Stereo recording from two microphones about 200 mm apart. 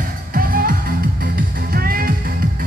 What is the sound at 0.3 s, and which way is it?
Music, 45° right (ahead or behind).